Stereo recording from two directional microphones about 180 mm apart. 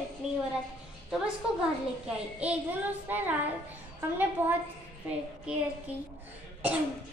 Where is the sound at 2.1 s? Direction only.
5° right (ahead or behind).